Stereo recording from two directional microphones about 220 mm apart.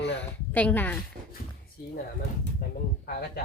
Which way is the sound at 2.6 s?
40° left (ahead or behind).